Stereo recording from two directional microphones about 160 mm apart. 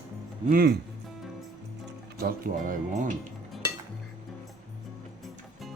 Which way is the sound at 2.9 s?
55° right (ahead or behind).